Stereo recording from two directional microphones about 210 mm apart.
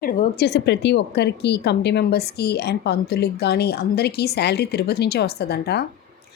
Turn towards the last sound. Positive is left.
turn(degrees=50)  # may be behind; listen again after turning